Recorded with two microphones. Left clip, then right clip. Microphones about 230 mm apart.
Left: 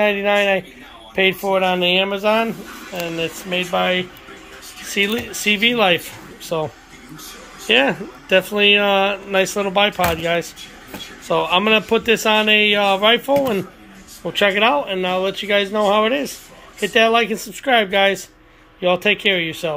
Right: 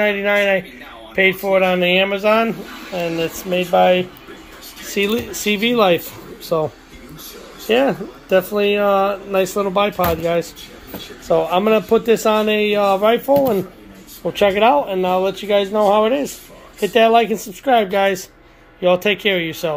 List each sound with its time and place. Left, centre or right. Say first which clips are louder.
0.0 s speech: even; centre
7.6 s speech: even; centre